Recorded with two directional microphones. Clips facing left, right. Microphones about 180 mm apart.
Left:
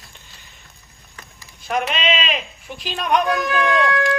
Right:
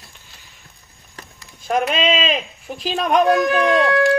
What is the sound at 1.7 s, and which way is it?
Speech, 40° right (ahead or behind).